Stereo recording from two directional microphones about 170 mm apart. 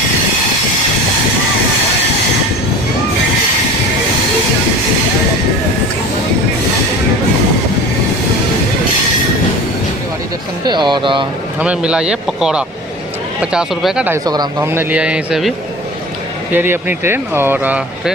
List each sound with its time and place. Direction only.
10.7 s speech: 25° right (ahead or behind)
11.6 s speech: 5° right (ahead or behind)
14.3 s speech: 20° right (ahead or behind)